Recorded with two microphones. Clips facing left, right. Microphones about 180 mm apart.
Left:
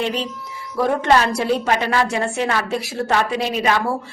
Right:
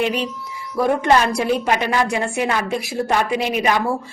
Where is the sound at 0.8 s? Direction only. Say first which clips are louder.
Right 1 dB; 10° right (ahead or behind).